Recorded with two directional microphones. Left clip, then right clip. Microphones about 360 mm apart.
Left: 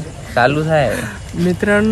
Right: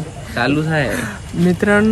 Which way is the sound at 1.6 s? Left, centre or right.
Centre.